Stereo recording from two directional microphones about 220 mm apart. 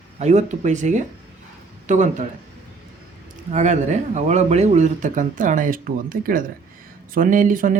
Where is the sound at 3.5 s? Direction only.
35° right (ahead or behind).